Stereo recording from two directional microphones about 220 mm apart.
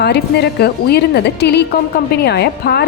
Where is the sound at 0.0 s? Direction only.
50° left (ahead or behind).